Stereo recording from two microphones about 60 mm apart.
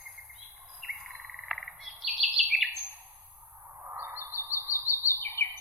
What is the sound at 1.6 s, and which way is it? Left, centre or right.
Bird, centre.